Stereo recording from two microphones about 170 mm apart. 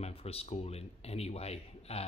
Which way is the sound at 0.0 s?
35° left (ahead or behind).